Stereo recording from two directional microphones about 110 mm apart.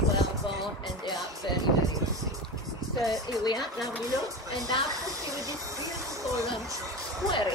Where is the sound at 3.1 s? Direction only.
35° left (ahead or behind).